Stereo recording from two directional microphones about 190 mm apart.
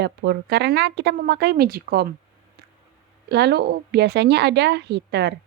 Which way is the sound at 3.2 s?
65° right (ahead or behind).